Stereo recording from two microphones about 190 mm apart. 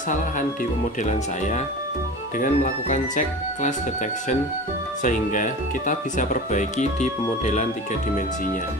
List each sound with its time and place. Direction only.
2.3 s speech: 45° left (ahead or behind)
5.0 s speech: 45° left (ahead or behind)